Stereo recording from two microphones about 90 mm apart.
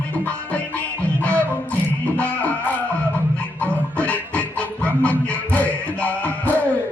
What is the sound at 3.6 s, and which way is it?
Music, 15° left (ahead or behind).